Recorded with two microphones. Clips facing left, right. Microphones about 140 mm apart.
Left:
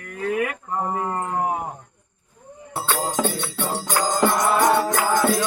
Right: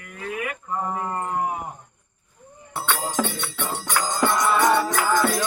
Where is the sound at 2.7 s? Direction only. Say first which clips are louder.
Left 1 dB; 35° left (ahead or behind).